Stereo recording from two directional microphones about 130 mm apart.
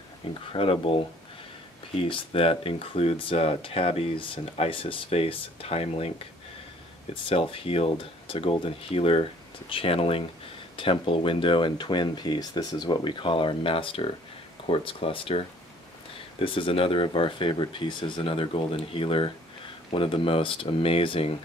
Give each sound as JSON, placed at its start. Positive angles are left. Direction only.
{"t": 0.5, "sound": "speech", "side_deg": 45}
{"t": 7.2, "sound": "speech", "side_deg": 45}